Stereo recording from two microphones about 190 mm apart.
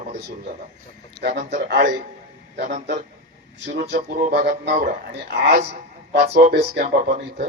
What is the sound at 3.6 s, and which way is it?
Speech, 70° right (ahead or behind).